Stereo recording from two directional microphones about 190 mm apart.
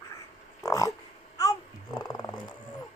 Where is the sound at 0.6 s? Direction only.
15° left (ahead or behind).